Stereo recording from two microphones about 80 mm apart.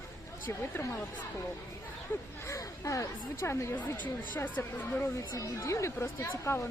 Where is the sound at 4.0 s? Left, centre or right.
Left.